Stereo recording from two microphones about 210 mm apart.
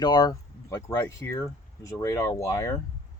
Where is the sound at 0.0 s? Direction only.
20° left (ahead or behind).